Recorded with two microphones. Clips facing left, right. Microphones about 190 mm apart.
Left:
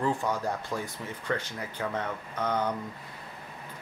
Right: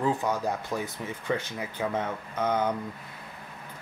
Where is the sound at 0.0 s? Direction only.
20° right (ahead or behind).